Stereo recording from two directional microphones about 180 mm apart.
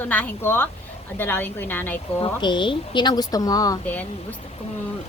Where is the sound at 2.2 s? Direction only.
25° left (ahead or behind).